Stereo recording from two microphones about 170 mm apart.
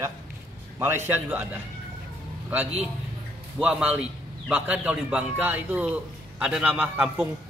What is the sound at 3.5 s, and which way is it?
A man's voice, 5° right (ahead or behind).